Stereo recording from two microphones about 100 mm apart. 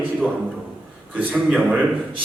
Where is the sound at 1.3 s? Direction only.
10° right (ahead or behind).